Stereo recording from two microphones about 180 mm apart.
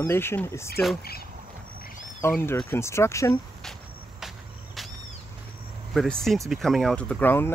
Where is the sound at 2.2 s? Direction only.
15° left (ahead or behind).